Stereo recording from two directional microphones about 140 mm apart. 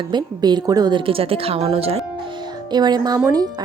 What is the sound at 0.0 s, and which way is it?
Speech, 30° right (ahead or behind).